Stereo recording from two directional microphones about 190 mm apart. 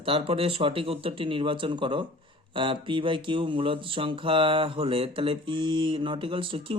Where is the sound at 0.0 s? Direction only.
30° right (ahead or behind).